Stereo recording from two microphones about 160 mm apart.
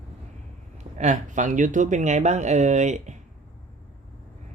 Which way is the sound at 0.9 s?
50° right (ahead or behind).